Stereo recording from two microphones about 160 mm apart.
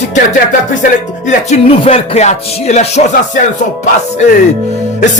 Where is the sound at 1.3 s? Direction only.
40° left (ahead or behind).